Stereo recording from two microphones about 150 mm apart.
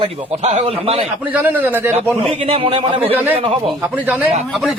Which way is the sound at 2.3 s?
40° right (ahead or behind).